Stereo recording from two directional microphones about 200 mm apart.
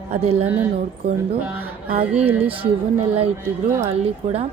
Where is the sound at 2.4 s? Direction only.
25° right (ahead or behind).